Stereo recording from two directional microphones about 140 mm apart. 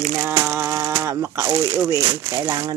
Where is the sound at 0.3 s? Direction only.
15° right (ahead or behind).